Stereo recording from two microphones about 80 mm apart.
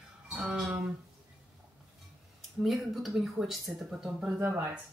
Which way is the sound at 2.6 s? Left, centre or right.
Centre.